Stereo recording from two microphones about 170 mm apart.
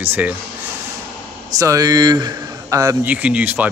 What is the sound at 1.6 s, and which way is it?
A man's voice, 20° right (ahead or behind).